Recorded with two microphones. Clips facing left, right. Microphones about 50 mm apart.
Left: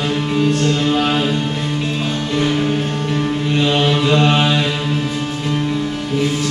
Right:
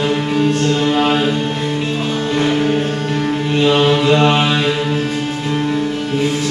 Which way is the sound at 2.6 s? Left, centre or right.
Centre.